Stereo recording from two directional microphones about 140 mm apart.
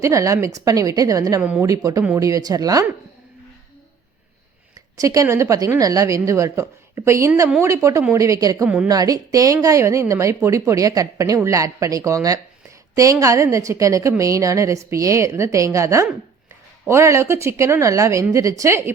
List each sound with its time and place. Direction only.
0.0 s a woman's voice: 20° right (ahead or behind)
1.4 s a woman's voice: 5° right (ahead or behind)
1.6 s a woman's voice: 25° right (ahead or behind)
4.9 s a woman's voice: 25° right (ahead or behind)
8.6 s a woman's voice: 5° right (ahead or behind)
8.9 s a woman's voice: 25° right (ahead or behind)